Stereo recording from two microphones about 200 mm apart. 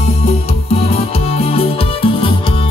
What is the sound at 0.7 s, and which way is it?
Music, 30° left (ahead or behind).